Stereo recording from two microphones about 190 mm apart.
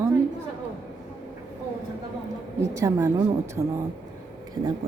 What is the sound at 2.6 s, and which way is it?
A woman's voice, 15° right (ahead or behind).